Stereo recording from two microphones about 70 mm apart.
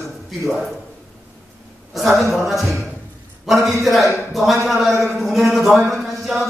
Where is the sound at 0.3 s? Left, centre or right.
Centre.